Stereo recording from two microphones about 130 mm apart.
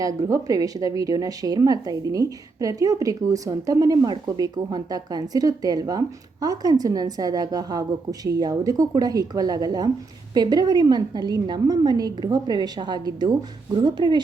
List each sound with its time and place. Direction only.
0.2 s a woman's voice: 25° right (ahead or behind)